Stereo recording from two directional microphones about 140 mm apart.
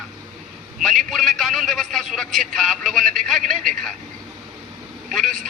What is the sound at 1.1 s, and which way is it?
A man's voice, centre (ahead or behind).